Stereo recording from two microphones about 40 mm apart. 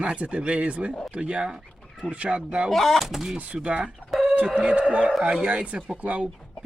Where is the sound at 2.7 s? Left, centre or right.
Centre.